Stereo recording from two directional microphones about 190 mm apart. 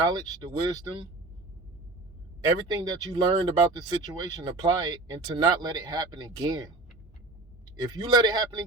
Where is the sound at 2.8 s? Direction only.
20° right (ahead or behind).